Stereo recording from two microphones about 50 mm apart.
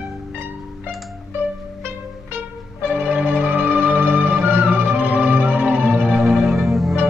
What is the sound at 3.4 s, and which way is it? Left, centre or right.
Music, right.